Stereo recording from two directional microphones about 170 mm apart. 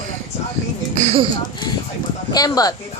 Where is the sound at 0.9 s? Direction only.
40° right (ahead or behind).